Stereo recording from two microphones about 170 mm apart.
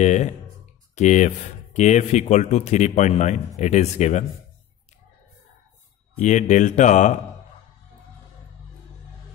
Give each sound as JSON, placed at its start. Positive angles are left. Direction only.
{"t": 0.0, "sound": "speech", "side_deg": 45}
{"t": 6.1, "sound": "speech", "side_deg": 45}